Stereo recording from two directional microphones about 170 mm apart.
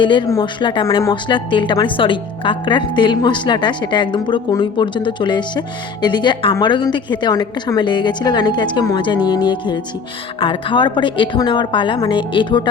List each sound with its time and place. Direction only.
0.0 s a woman's voice: 30° left (ahead or behind)